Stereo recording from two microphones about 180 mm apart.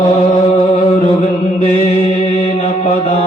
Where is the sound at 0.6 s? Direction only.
30° left (ahead or behind).